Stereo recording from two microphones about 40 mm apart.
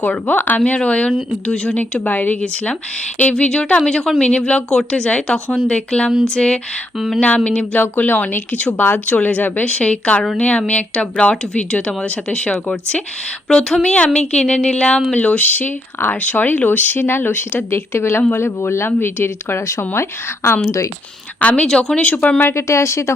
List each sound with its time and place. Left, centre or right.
0.3 s speech: left
0.6 s speech: left
2.0 s speech: left
3.2 s speech: left
7.8 s speech: left
9.7 s speech: left
15.1 s speech: left
18.9 s speech: left
20.4 s speech: left
21.4 s speech: left